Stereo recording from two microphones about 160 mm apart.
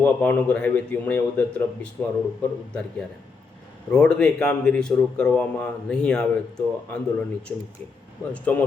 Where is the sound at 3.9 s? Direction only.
5° left (ahead or behind).